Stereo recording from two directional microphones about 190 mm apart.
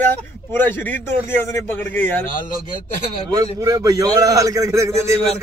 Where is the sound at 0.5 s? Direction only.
10° left (ahead or behind).